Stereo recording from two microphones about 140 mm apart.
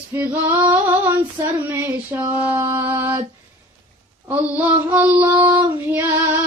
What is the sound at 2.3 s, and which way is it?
Child singing, 10° right (ahead or behind).